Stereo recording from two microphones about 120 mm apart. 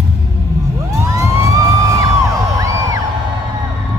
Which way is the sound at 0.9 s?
25° right (ahead or behind).